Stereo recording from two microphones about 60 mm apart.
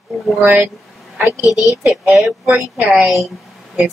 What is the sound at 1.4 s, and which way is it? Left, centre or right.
Speech, left.